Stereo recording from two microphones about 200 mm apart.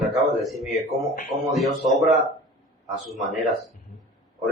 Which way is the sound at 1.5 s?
Centre (ahead or behind).